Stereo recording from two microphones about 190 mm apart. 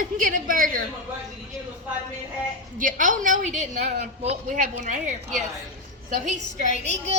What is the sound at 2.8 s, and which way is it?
A woman's voice, 45° right (ahead or behind).